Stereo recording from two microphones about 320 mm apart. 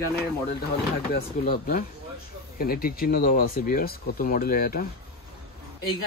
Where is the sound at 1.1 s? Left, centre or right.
Left.